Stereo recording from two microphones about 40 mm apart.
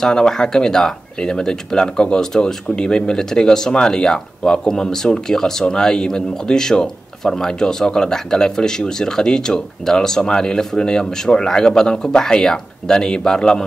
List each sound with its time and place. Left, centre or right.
0.0 s speech: centre